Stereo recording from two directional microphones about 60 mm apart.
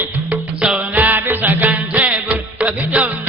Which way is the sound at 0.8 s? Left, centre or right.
Right.